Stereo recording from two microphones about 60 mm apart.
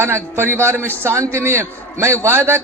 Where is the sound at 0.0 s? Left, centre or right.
Right.